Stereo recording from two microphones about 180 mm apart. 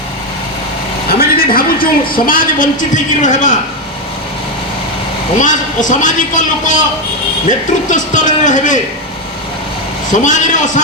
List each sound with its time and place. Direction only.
1.2 s a woman's voice: 55° left (ahead or behind)
5.4 s a woman's voice: 45° left (ahead or behind)
7.9 s a woman's voice: 45° left (ahead or behind)
10.1 s a woman's voice: 45° left (ahead or behind)